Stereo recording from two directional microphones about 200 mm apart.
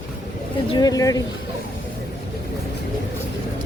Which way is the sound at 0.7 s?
20° left (ahead or behind).